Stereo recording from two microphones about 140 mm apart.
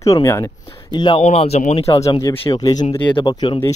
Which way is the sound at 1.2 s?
50° left (ahead or behind).